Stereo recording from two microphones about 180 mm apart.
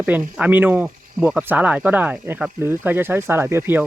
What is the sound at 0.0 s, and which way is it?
Speech, 10° right (ahead or behind).